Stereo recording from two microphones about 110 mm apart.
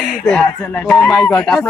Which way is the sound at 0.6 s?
15° left (ahead or behind).